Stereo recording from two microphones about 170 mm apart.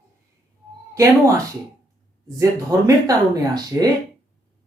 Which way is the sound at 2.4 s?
20° right (ahead or behind).